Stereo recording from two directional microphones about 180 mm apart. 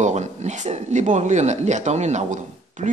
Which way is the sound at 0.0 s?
40° right (ahead or behind).